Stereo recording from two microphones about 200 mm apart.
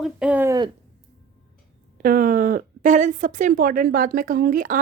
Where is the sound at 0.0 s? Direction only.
5° right (ahead or behind).